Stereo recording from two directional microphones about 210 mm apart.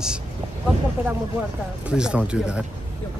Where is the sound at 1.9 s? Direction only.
5° right (ahead or behind).